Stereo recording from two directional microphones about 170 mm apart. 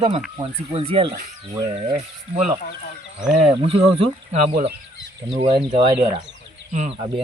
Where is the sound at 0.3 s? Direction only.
30° right (ahead or behind).